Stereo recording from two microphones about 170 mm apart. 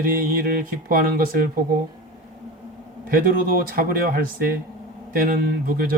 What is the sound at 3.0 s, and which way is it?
Speech, 60° right (ahead or behind).